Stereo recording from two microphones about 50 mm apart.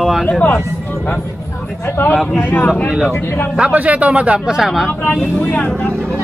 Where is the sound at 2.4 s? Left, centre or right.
Left.